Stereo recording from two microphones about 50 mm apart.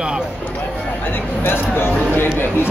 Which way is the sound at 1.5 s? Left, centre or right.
Left.